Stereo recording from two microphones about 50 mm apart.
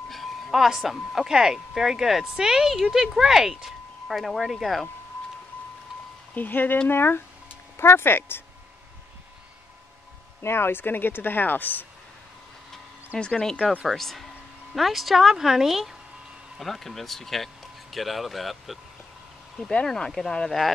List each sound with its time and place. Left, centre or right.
0.1 s a sound: centre
1.1 s speech: centre
6.3 s speech: left
10.4 s speech: left
13.2 s speech: centre
13.8 s speech: centre
19.9 s speech: centre